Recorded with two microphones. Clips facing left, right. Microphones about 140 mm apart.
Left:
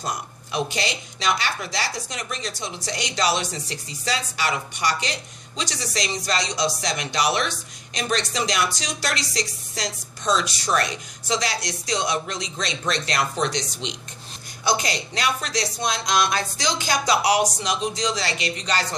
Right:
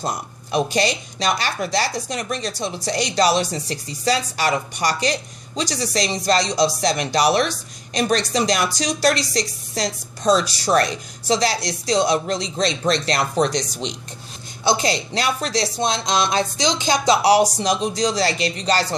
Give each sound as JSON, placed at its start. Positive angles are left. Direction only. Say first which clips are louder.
{"t": 0.0, "sound": "speech", "louder": "right 3 dB", "side_deg": -40}
{"t": 14.6, "sound": "speech", "louder": "right 4 dB", "side_deg": -30}